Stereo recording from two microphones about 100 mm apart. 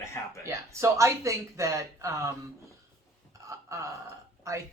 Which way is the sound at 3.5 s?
30° right (ahead or behind).